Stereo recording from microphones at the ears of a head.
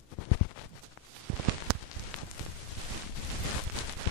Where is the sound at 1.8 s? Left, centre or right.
Left.